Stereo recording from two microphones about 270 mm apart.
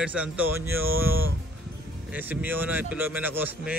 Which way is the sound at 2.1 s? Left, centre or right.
Centre.